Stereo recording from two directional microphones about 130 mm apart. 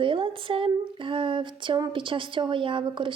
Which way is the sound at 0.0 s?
40° right (ahead or behind).